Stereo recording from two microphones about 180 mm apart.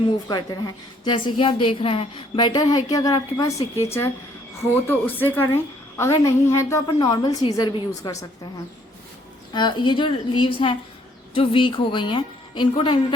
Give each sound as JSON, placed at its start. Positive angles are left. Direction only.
{"t": 0.3, "sound": "a woman's voice", "side_deg": 20}
{"t": 9.5, "sound": "a woman's voice", "side_deg": 25}